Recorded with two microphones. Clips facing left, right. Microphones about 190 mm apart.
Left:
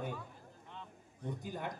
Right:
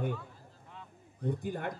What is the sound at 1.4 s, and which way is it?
Speech, 60° right (ahead or behind).